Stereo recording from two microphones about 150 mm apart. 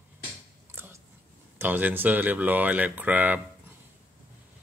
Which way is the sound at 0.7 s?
15° right (ahead or behind).